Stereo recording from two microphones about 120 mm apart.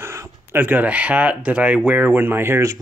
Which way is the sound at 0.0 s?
20° right (ahead or behind).